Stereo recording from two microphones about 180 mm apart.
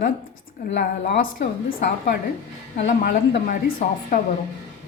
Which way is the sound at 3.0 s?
60° left (ahead or behind).